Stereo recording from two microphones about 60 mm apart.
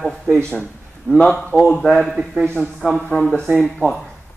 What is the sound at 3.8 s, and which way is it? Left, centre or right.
Speech, right.